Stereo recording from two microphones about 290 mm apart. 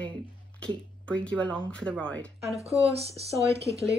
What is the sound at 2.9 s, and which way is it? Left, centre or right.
Speech, right.